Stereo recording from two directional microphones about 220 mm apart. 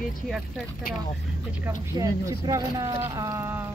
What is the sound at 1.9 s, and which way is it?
Speech, 15° right (ahead or behind).